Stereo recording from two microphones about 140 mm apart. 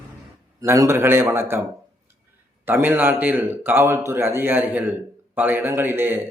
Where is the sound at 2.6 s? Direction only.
15° right (ahead or behind).